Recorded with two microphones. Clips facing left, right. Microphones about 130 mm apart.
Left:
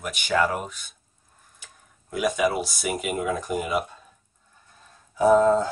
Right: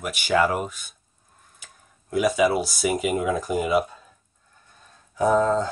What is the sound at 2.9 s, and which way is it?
Speech, centre (ahead or behind).